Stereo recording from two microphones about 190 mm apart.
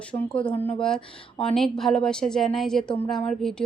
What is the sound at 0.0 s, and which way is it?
Speech, 5° left (ahead or behind).